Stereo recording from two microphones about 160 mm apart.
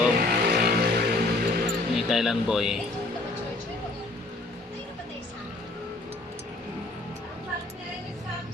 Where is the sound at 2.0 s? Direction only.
Centre (ahead or behind).